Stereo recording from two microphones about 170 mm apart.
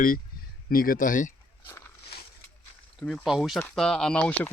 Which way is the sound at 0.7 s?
55° left (ahead or behind).